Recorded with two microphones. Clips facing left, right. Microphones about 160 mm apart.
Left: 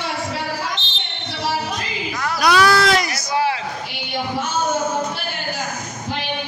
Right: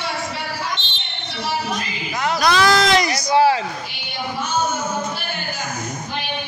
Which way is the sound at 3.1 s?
20° right (ahead or behind).